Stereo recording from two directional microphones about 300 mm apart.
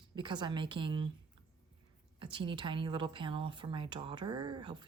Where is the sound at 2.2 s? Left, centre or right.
Centre.